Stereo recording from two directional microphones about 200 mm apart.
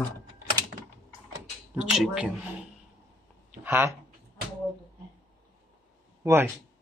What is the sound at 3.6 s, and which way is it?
Speech, 10° right (ahead or behind).